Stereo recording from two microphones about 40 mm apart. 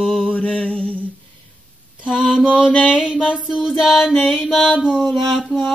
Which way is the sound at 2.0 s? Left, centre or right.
Centre.